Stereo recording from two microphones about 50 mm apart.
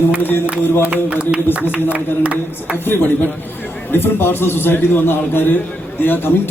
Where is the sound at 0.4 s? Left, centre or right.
Right.